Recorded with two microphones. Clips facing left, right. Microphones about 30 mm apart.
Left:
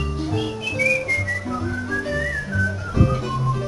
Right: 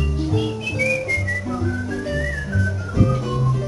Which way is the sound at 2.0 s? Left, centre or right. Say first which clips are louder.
Even; centre.